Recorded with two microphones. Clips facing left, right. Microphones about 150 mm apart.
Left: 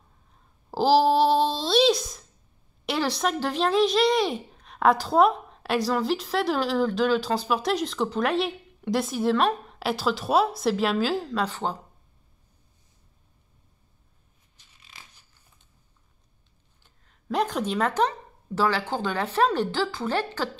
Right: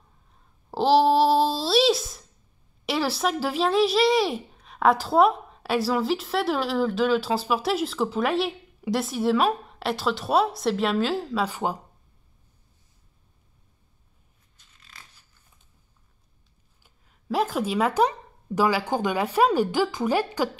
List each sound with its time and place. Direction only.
0.3 s a sound: centre (ahead or behind)
2.8 s speech: centre (ahead or behind)
16.8 s speech: 5° right (ahead or behind)